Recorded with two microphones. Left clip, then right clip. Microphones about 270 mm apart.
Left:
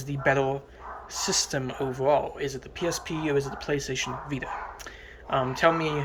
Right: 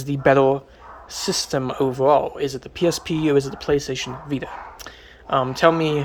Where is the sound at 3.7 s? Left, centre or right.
Right.